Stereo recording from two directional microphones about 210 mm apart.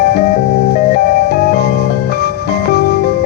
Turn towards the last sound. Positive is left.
turn(degrees=50)  # may be behind; listen again after turning